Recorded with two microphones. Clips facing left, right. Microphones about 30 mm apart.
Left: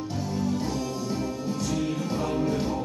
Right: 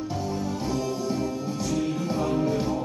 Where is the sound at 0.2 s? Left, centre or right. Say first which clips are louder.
Left 4 dB; centre.